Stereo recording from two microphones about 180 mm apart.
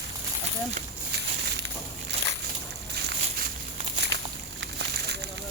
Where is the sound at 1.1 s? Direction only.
70° right (ahead or behind).